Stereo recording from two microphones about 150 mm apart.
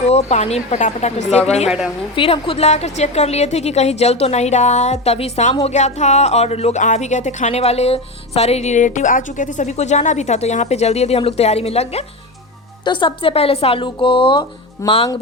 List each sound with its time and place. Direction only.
0.1 s speech: 50° left (ahead or behind)
12.8 s a woman's voice: 30° left (ahead or behind)